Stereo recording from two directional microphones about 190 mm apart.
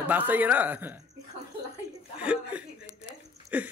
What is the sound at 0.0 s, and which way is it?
Speech, 10° right (ahead or behind).